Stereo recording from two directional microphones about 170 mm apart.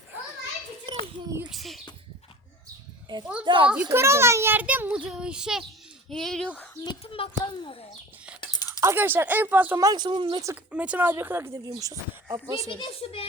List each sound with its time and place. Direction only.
1.5 s a sound: centre (ahead or behind)
3.1 s a child's voice: 25° right (ahead or behind)
3.7 s a child's voice: 10° right (ahead or behind)
6.8 s a child's voice: 35° left (ahead or behind)
8.4 s a sound: 25° left (ahead or behind)
8.8 s a child's voice: 15° right (ahead or behind); by 10.4 s 30° right (ahead or behind)
10.7 s a child's voice: 5° right (ahead or behind)
12.7 s a child's voice: 35° left (ahead or behind)